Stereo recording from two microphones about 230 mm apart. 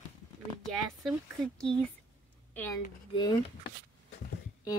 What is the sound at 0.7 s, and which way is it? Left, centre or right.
Speech, centre.